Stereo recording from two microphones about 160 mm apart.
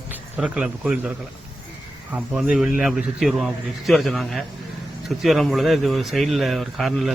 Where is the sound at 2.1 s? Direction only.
5° right (ahead or behind).